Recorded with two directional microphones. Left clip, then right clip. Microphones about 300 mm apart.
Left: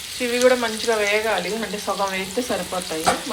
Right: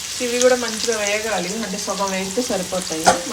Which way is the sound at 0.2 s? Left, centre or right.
Centre.